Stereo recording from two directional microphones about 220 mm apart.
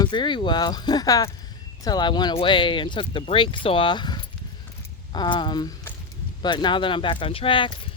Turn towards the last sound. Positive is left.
turn(degrees=20)  # may be behind; listen again after turning